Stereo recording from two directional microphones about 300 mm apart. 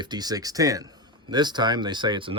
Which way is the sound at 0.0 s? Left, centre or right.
Centre.